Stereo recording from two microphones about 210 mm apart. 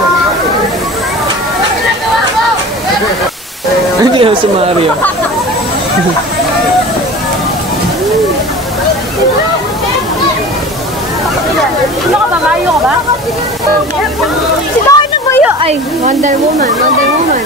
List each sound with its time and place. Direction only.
4.0 s music: 25° right (ahead or behind)
14.9 s a sound: 15° left (ahead or behind)
15.6 s speech: 35° right (ahead or behind)